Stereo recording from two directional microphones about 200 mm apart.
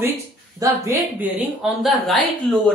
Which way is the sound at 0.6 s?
10° right (ahead or behind).